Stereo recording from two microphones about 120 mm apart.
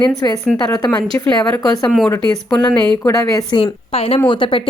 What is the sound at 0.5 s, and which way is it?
Speech, 35° left (ahead or behind).